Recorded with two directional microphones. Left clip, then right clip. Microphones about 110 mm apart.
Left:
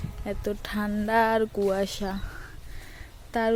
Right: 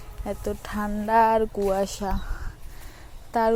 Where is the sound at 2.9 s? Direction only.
5° left (ahead or behind).